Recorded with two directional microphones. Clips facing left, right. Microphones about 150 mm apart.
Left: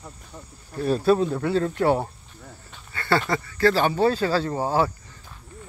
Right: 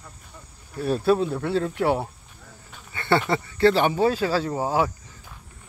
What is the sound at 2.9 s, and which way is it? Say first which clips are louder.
Speech: right 1 dB; 20° right (ahead or behind).